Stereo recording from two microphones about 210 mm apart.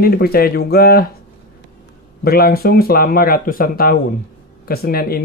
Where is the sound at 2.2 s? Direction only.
45° left (ahead or behind).